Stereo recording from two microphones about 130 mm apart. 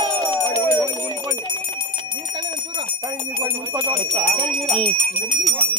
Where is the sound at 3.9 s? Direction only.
25° right (ahead or behind).